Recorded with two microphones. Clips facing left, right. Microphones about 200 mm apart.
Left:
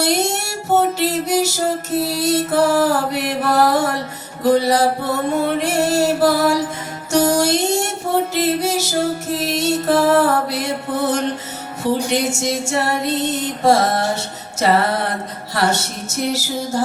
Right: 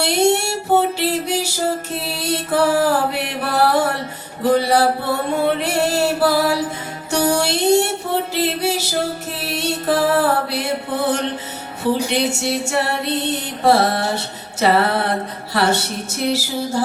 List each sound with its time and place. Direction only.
0.0 s music: 40° left (ahead or behind)
2.0 s mantra: 40° left (ahead or behind)
4.6 s music: 40° left (ahead or behind)